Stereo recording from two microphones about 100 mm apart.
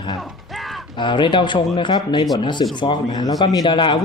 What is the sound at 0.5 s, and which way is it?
Mechanisms, centre (ahead or behind).